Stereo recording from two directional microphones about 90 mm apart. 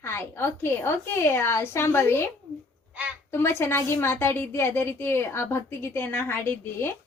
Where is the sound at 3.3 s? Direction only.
25° left (ahead or behind).